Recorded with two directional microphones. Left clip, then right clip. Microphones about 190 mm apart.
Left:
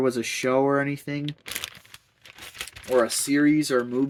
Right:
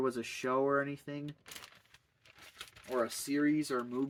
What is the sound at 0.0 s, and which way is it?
Speech, 25° left (ahead or behind).